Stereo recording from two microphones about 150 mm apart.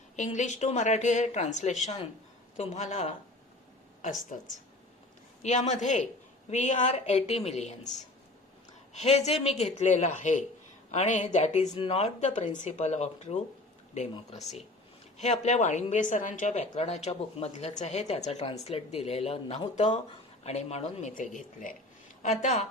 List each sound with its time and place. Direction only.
0.2 s speech: 50° left (ahead or behind)
4.3 s speech: 55° left (ahead or behind)
15.2 s speech: 50° left (ahead or behind)
21.1 s speech: 60° left (ahead or behind)